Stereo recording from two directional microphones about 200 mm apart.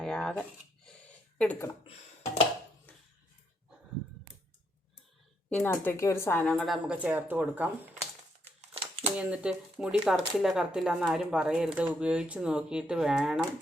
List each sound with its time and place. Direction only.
0.0 s speech: 5° left (ahead or behind)
5.5 s speech: 10° left (ahead or behind); by 7.7 s 10° right (ahead or behind)
8.6 s a sound: 30° right (ahead or behind)
9.1 s speech: 5° right (ahead or behind)